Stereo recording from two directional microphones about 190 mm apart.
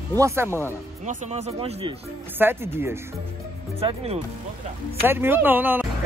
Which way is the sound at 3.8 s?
30° right (ahead or behind).